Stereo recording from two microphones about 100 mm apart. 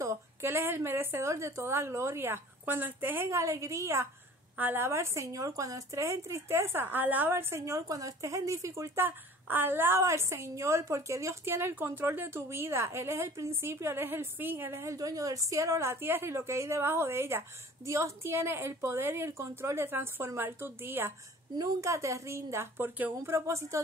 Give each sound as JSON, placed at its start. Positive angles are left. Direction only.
{"t": 0.0, "sound": "a woman's voice", "side_deg": -25}
{"t": 21.5, "sound": "a woman's voice", "side_deg": -35}